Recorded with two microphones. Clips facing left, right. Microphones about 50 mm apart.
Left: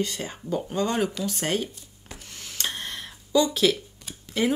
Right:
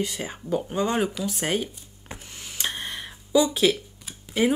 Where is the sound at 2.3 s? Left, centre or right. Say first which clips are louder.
Right 1 dB; centre.